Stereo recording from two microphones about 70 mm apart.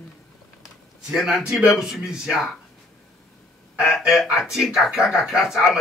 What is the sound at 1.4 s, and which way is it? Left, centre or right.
Speech, centre.